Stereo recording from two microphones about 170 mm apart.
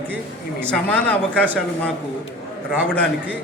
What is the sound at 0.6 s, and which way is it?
Speech, 5° left (ahead or behind).